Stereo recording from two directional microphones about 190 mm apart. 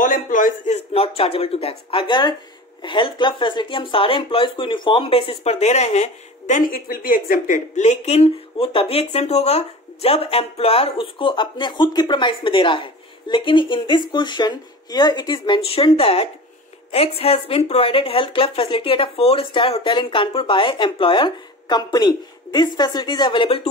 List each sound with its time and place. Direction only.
0.0 s speech: 45° left (ahead or behind); by 23.7 s 30° left (ahead or behind)